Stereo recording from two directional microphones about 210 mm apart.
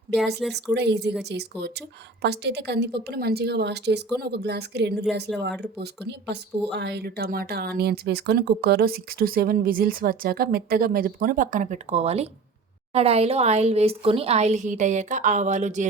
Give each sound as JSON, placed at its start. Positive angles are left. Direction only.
{"t": 0.5, "sound": "a woman's voice", "side_deg": -55}